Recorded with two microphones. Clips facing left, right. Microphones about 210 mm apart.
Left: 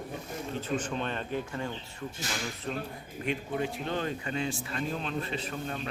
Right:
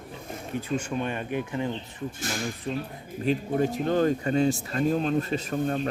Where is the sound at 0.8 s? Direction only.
10° right (ahead or behind).